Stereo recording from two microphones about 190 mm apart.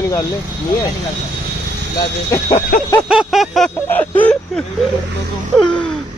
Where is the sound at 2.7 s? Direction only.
55° left (ahead or behind).